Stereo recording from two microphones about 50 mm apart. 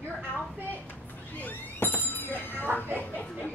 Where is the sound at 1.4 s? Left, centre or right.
Left.